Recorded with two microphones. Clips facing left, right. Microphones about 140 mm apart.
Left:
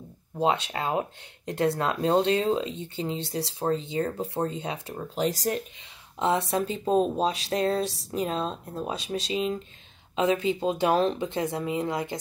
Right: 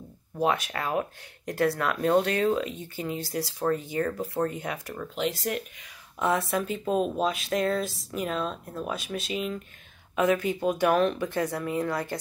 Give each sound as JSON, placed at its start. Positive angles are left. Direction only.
{"t": 0.4, "sound": "speech", "side_deg": 25}
{"t": 6.1, "sound": "speech", "side_deg": 25}